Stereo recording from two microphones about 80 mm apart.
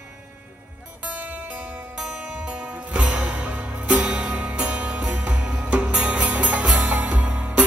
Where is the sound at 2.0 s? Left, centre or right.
Centre.